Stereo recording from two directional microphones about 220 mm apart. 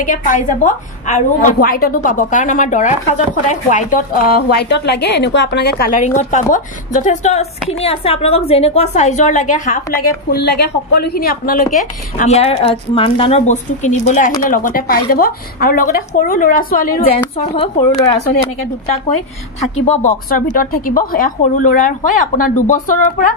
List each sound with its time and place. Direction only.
0.0 s a woman's voice: 35° left (ahead or behind)
10.3 s a woman's voice: 45° left (ahead or behind)
12.2 s a woman's voice: 30° left (ahead or behind)
19.8 s a woman's voice: 35° left (ahead or behind)